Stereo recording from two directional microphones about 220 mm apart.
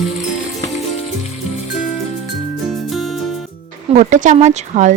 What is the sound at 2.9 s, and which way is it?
Music, centre (ahead or behind).